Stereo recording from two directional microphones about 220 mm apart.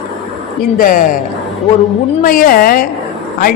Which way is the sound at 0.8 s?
40° left (ahead or behind).